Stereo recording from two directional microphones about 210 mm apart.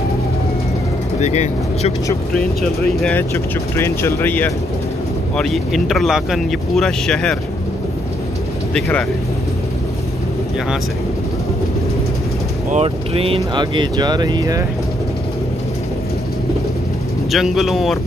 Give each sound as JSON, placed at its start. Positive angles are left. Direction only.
{"t": 1.2, "sound": "speech", "side_deg": 30}
{"t": 2.3, "sound": "speech", "side_deg": 5}
{"t": 8.7, "sound": "speech", "side_deg": 5}
{"t": 12.7, "sound": "speech", "side_deg": -25}
{"t": 17.3, "sound": "speech", "side_deg": 0}